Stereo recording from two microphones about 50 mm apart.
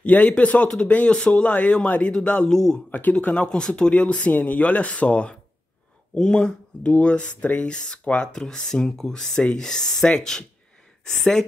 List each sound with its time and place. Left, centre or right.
0.0 s speech: left
2.5 s speech: centre
2.9 s speech: left; by 10.4 s centre